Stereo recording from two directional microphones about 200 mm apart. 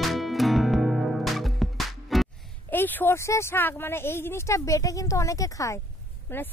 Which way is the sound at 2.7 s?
10° left (ahead or behind).